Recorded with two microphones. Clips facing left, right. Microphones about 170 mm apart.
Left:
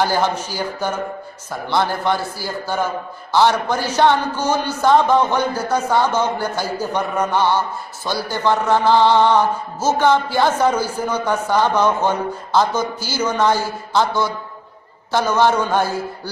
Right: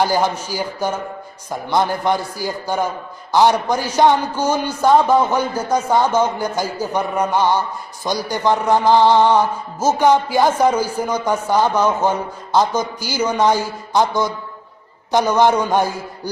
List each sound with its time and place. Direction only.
0.0 s a man's voice: 10° right (ahead or behind)